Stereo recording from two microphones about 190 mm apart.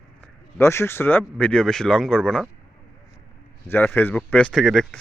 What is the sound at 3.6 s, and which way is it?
Speech, 10° left (ahead or behind).